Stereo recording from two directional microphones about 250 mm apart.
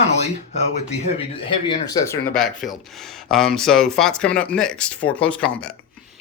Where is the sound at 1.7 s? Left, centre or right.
Centre.